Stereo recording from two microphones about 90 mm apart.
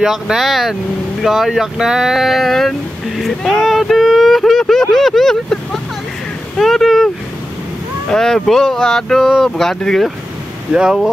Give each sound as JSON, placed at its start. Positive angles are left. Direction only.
{"t": 0.0, "sound": "speech", "side_deg": -5}
{"t": 8.1, "sound": "speech", "side_deg": 5}
{"t": 10.7, "sound": "speech", "side_deg": -10}